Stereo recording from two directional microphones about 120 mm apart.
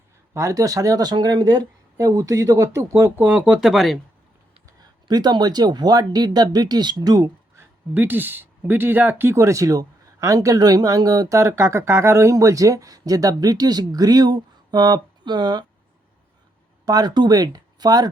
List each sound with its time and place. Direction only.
0.3 s speech: 25° right (ahead or behind); by 3.9 s centre (ahead or behind)
5.0 s speech: 35° right (ahead or behind)
16.8 s speech: 35° right (ahead or behind)